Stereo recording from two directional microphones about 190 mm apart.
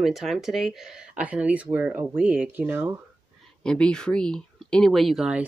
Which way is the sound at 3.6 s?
5° left (ahead or behind).